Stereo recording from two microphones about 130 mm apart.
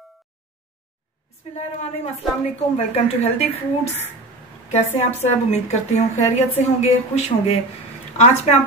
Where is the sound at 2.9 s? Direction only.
55° left (ahead or behind).